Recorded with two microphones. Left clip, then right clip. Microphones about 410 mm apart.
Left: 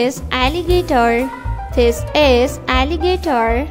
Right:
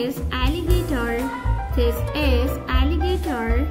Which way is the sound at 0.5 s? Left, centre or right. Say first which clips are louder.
Left 10 dB; left.